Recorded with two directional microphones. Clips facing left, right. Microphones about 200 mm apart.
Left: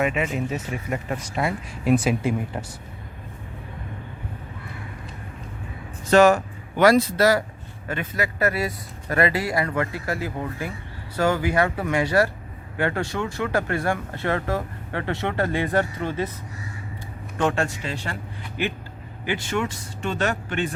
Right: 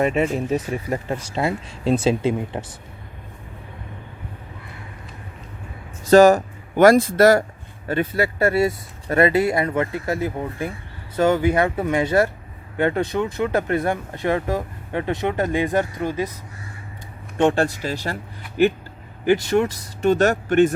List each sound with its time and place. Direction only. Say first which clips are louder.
0.0 s speech: right 4 dB; 35° right (ahead or behind)
6.1 s speech: right 4 dB; 40° right (ahead or behind)
7.9 s speech: right 6 dB; 35° right (ahead or behind); by 16.3 s 15° right (ahead or behind)
17.3 s speech: right 5 dB; 30° right (ahead or behind)
19.2 s speech: right 8 dB; 40° right (ahead or behind)